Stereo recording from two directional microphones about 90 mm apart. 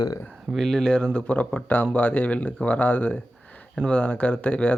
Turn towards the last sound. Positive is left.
turn(degrees=15)  # may be behind; listen again after turning